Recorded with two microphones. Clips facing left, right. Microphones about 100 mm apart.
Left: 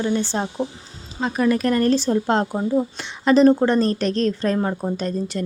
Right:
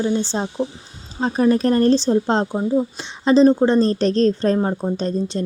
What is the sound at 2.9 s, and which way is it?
Speech, 20° right (ahead or behind).